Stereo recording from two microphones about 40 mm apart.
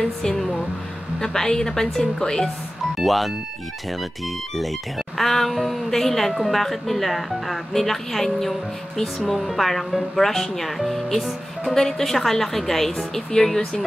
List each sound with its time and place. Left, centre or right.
0.0 s a woman's voice: centre
3.0 s speech: centre
4.6 s a woman's voice: centre